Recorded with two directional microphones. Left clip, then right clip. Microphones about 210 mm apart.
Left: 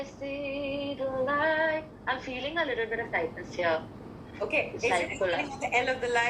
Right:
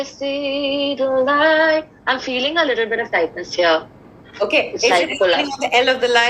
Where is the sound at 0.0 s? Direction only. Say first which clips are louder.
Right 13 dB; 45° right (ahead or behind).